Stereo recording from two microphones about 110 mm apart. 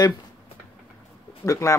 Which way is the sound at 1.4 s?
30° left (ahead or behind).